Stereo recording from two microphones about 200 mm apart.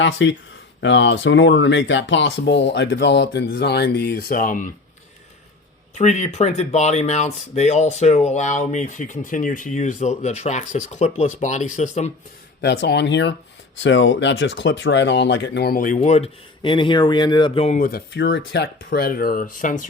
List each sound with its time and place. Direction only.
0.0 s speech: 65° left (ahead or behind); by 4.7 s 40° left (ahead or behind)
5.9 s speech: 35° left (ahead or behind)
12.6 s speech: 55° left (ahead or behind); by 17.7 s 25° left (ahead or behind)
17.7 s speech: 45° left (ahead or behind)